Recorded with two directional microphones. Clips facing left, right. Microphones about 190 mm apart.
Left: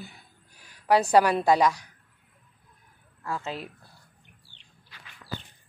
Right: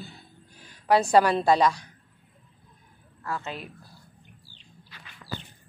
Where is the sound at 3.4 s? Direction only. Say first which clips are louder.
Left 2 dB; 30° left (ahead or behind).